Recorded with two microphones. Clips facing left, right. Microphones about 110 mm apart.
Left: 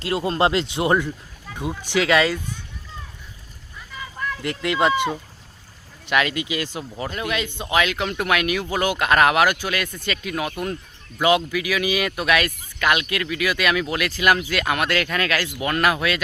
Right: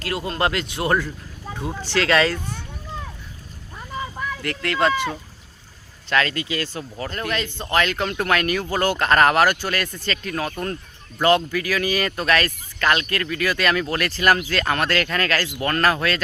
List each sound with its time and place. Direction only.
0.0 s speech: 25° left (ahead or behind)
1.5 s a sound: 30° right (ahead or behind)
1.8 s speech: 10° left (ahead or behind)
4.4 s speech: 15° left (ahead or behind)